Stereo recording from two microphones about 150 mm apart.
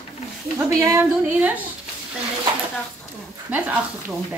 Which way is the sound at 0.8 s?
15° right (ahead or behind).